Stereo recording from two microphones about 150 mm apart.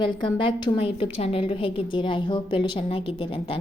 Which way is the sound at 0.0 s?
30° left (ahead or behind).